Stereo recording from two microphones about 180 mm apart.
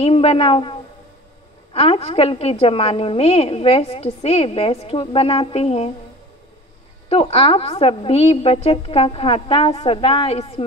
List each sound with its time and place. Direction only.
0.0 s a woman's voice: 35° left (ahead or behind)
7.1 s a woman's voice: 35° left (ahead or behind)